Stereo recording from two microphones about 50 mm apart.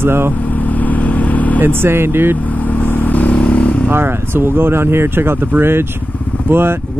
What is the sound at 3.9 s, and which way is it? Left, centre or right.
Speech, right.